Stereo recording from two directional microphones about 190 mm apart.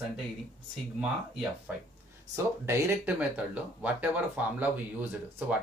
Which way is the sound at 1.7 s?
5° right (ahead or behind).